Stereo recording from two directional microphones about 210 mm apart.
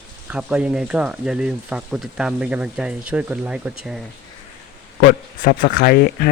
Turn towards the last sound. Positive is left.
turn(degrees=45)  # may be behind; listen again after turning